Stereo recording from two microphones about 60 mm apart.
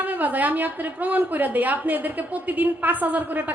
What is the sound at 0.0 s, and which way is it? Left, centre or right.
A woman's voice, right.